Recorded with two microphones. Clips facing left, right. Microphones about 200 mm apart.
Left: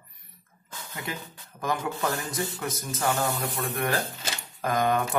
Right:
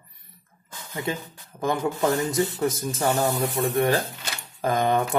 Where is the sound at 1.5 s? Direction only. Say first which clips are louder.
Right 5 dB; 25° right (ahead or behind).